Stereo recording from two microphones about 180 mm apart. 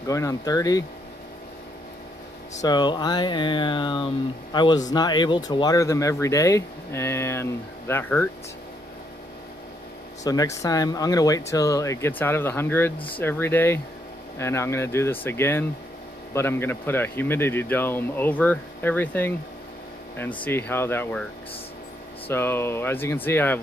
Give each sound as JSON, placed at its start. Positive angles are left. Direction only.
{"t": 0.0, "sound": "speech", "side_deg": 20}
{"t": 2.6, "sound": "speech", "side_deg": 25}
{"t": 10.2, "sound": "speech", "side_deg": 20}
{"t": 22.3, "sound": "speech", "side_deg": 15}